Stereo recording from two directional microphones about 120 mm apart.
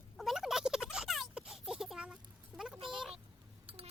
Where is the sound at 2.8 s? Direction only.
45° right (ahead or behind).